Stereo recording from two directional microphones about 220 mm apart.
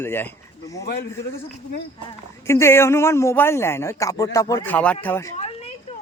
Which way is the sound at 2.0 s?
10° left (ahead or behind).